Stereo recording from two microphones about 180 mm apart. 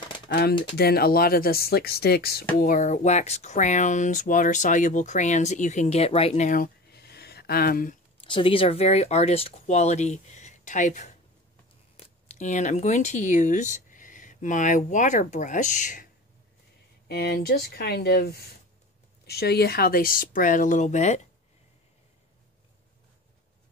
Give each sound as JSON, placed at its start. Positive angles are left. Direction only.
{"t": 0.3, "sound": "speech", "side_deg": 60}
{"t": 2.6, "sound": "speech", "side_deg": 45}
{"t": 8.2, "sound": "speech", "side_deg": 30}
{"t": 12.3, "sound": "speech", "side_deg": 40}
{"t": 17.1, "sound": "speech", "side_deg": 60}